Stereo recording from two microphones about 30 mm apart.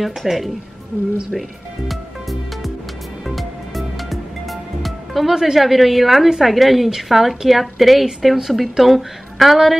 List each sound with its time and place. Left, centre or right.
0.0 s a woman's voice: centre
3.3 s music: centre
5.3 s a woman's voice: centre
5.6 s a woman's voice: centre